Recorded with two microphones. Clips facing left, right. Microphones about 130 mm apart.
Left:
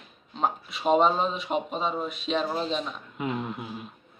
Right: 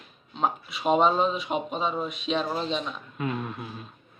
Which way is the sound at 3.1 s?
15° left (ahead or behind).